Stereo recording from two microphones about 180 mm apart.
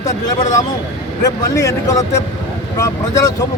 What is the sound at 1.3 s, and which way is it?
Speech, 20° left (ahead or behind).